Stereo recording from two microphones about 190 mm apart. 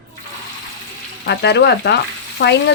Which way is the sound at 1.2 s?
60° left (ahead or behind).